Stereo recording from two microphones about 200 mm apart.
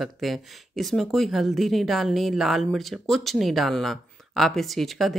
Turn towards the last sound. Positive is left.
turn(degrees=0)  # may be behind; listen again after turning